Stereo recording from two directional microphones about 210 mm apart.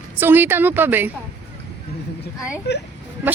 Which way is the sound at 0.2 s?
10° right (ahead or behind).